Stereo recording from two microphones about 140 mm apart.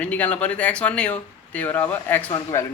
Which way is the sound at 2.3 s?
25° left (ahead or behind).